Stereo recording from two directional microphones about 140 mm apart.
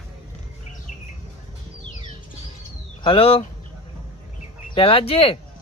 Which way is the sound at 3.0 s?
40° left (ahead or behind).